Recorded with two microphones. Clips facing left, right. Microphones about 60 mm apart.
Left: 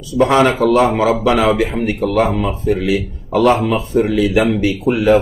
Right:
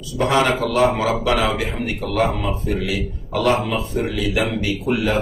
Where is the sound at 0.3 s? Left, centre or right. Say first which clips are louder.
Left 4 dB; left.